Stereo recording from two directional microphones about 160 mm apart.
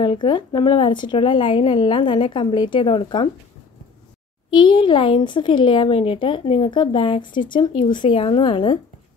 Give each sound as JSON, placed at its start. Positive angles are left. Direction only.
{"t": 0.0, "sound": "a woman's voice", "side_deg": 30}
{"t": 4.6, "sound": "a woman's voice", "side_deg": 30}